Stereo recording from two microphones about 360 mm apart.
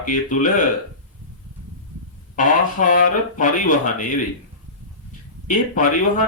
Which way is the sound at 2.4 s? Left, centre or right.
Left.